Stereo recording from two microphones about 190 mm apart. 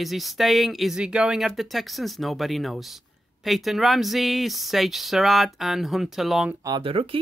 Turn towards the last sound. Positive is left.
turn(degrees=-30)  # may be behind; listen again after turning